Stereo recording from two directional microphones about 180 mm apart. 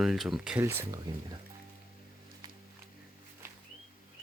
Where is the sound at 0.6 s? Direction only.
15° right (ahead or behind).